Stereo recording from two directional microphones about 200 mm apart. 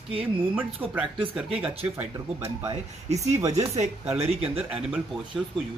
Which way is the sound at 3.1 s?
35° right (ahead or behind).